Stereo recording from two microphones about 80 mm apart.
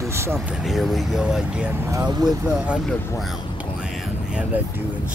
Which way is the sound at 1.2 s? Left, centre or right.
Centre.